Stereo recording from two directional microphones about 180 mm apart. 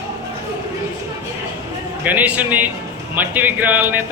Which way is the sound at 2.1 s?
10° right (ahead or behind).